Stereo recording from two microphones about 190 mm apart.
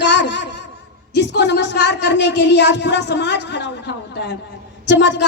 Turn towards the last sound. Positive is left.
turn(degrees=65)  # may be behind; listen again after turning